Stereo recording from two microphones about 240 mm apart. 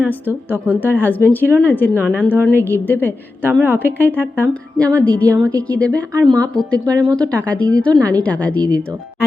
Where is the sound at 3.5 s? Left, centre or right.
Centre.